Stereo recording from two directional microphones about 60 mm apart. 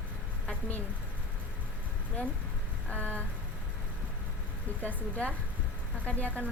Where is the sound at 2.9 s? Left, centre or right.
Left.